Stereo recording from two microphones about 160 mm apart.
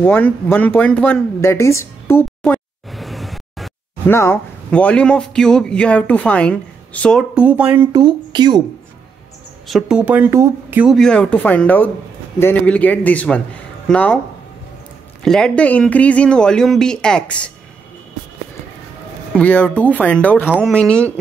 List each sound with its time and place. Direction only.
0.0 s speech: 10° left (ahead or behind)
2.9 s a sound: centre (ahead or behind)
4.1 s speech: 15° left (ahead or behind)
7.3 s a woman's voice: 10° right (ahead or behind)
7.9 s speech: 30° right (ahead or behind)
9.7 s a woman's voice: 5° right (ahead or behind)
11.0 s speech: 5° left (ahead or behind)
15.2 s speech: 5° left (ahead or behind)
19.3 s speech: 10° left (ahead or behind)